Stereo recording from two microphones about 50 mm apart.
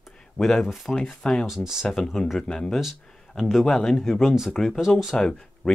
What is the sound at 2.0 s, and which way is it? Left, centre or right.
Speech, centre.